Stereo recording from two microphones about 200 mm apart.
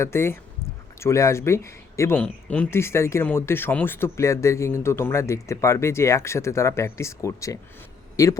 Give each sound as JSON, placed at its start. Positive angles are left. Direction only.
{"t": 0.0, "sound": "speech", "side_deg": 10}